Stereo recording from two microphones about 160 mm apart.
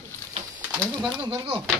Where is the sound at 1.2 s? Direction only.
30° right (ahead or behind).